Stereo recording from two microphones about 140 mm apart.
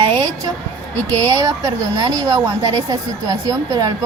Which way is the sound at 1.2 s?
25° right (ahead or behind).